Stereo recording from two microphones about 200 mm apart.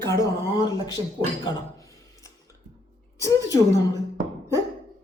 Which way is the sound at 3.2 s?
15° left (ahead or behind).